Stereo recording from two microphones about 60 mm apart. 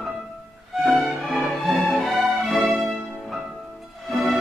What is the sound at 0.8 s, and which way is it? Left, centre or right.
Music, centre.